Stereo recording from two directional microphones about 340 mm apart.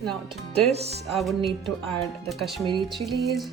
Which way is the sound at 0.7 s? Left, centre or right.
Centre.